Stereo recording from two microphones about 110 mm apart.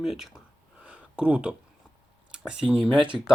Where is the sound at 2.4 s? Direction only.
10° right (ahead or behind).